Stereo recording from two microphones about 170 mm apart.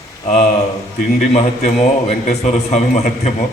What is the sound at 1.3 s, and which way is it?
A man's voice, 40° left (ahead or behind).